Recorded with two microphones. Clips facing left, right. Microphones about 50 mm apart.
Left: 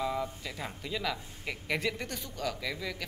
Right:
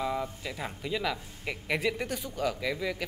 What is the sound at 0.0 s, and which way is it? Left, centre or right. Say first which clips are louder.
Speech: right 1 dB; centre.